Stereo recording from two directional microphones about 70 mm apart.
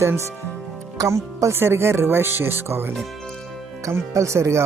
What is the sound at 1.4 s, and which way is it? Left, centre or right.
Speech, right.